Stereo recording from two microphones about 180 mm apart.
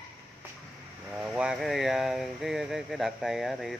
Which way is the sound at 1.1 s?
5° right (ahead or behind).